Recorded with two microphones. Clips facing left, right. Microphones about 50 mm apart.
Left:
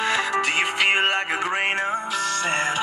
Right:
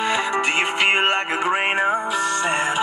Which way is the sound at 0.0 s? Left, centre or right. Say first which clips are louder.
Right 1 dB; centre.